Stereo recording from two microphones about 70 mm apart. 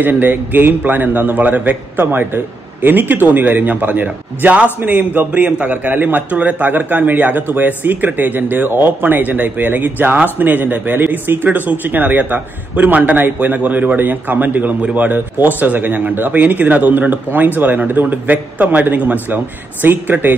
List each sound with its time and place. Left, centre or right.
0.0 s a man's voice: right